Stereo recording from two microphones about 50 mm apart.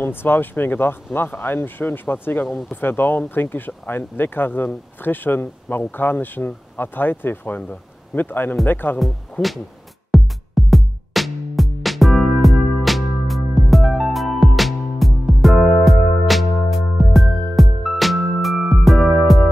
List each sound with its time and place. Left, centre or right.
0.0 s speech: left
10.1 s music: centre